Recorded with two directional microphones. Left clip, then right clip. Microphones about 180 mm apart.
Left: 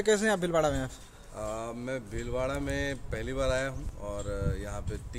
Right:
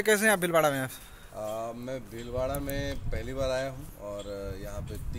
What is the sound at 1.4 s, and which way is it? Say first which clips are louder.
Speech: right 1 dB; 30° left (ahead or behind).